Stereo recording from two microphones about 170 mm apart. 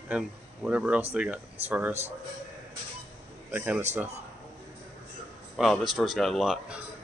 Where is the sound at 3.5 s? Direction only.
10° right (ahead or behind).